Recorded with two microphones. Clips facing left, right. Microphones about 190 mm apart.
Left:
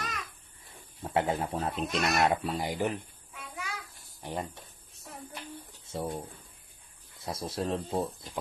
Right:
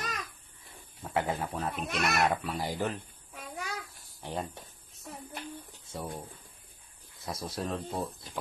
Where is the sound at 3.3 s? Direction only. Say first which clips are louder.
Right 2 dB; 40° right (ahead or behind).